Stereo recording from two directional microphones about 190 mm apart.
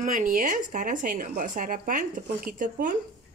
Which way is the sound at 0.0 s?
45° right (ahead or behind).